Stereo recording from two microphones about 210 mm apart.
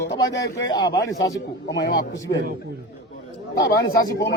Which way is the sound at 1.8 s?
55° left (ahead or behind).